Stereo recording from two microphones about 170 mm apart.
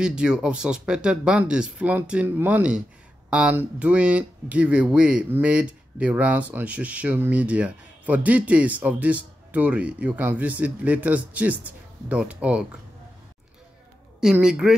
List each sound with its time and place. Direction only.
0.0 s speech: 5° right (ahead or behind)
14.2 s speech: 5° right (ahead or behind)